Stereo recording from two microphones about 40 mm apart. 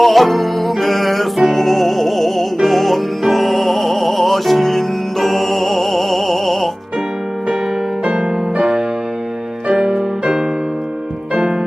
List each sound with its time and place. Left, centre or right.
0.0 s music: centre
8.0 s music: right
9.6 s music: centre